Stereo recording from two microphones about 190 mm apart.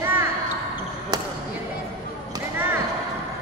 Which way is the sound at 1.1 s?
20° right (ahead or behind).